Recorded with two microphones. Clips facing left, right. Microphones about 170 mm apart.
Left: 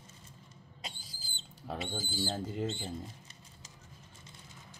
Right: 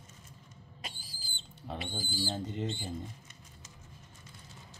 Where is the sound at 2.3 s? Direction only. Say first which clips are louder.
Left 1 dB; 5° left (ahead or behind).